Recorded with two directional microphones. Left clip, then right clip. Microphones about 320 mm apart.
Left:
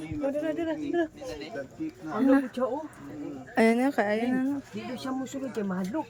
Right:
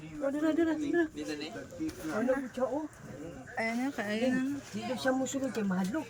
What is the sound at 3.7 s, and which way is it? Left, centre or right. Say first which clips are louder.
Speech: left 8 dB; centre.